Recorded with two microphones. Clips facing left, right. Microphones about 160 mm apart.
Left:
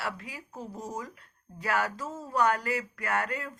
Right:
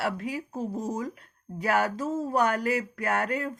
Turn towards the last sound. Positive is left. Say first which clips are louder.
# right 4 dB
turn(degrees=-50)  # may be behind; listen again after turning